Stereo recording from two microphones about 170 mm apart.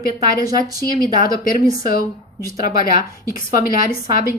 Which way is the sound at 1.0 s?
55° left (ahead or behind).